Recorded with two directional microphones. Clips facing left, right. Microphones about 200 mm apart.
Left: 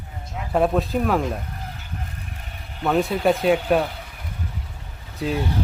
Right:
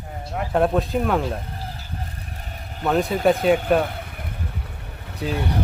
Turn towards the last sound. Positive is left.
turn(degrees=0)  # may be behind; listen again after turning